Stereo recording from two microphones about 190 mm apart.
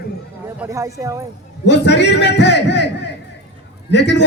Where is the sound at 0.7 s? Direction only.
15° right (ahead or behind).